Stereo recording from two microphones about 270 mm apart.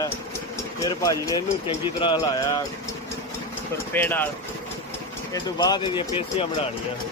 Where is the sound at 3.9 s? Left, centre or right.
Centre.